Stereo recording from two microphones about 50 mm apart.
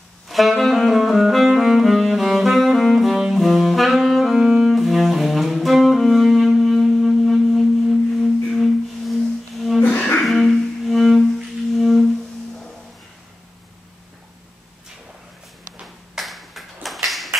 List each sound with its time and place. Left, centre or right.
0.3 s saxophone: centre
8.2 s music: centre
9.8 s music: left
10.2 s music: centre
15.8 s ping: centre